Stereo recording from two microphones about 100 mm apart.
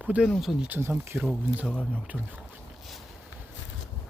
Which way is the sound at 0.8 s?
25° right (ahead or behind).